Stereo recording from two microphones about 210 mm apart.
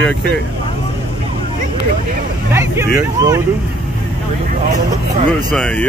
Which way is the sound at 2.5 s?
15° right (ahead or behind).